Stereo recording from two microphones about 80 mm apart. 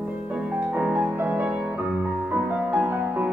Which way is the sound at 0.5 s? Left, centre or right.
Centre.